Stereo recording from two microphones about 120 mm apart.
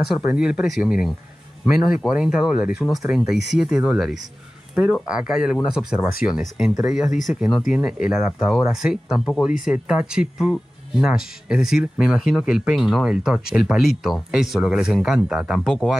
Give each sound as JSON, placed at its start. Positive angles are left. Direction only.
{"t": 0.0, "sound": "speech", "side_deg": -5}